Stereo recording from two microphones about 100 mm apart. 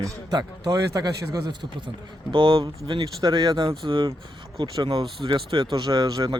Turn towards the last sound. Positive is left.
turn(degrees=-40)  # may be behind; listen again after turning